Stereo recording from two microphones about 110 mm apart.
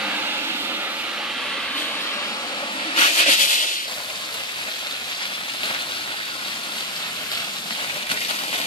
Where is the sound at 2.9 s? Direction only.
70° left (ahead or behind).